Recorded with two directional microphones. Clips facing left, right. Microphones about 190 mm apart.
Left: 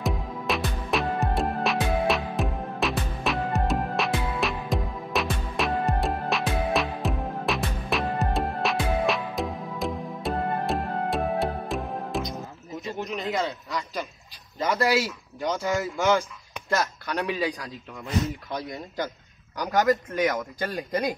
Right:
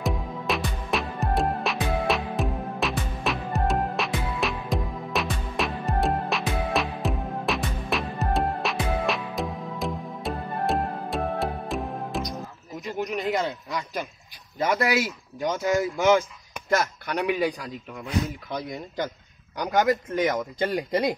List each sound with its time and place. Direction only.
0.0 s music: centre (ahead or behind)
14.7 s speech: 15° right (ahead or behind)
18.0 s speech: centre (ahead or behind)
19.5 s speech: 20° right (ahead or behind)